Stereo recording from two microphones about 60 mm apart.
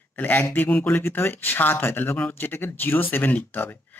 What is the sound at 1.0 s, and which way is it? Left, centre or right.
Speech, left.